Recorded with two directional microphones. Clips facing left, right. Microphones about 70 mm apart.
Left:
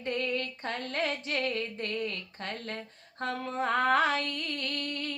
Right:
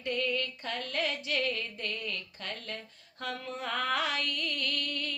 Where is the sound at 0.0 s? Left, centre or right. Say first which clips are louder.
Even; left.